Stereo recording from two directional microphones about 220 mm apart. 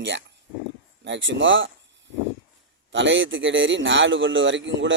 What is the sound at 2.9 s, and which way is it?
A man's voice, 55° right (ahead or behind).